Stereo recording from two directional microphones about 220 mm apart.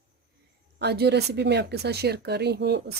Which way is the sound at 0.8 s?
50° right (ahead or behind).